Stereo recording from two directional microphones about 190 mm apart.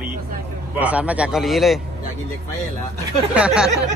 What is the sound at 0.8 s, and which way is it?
Speech, 5° right (ahead or behind).